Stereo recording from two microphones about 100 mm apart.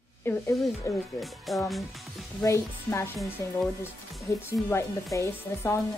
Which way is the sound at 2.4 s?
30° left (ahead or behind).